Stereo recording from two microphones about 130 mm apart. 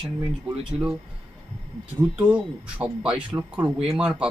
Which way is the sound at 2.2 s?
10° right (ahead or behind).